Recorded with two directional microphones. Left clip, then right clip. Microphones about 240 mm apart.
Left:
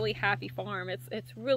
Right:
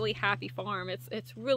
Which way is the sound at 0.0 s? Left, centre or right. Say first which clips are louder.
Even; centre.